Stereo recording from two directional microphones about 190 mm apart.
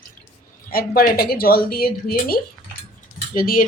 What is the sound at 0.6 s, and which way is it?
Speech, 50° left (ahead or behind).